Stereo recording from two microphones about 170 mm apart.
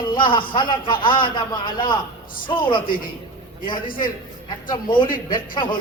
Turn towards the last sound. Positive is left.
turn(degrees=25)  # may be behind; listen again after turning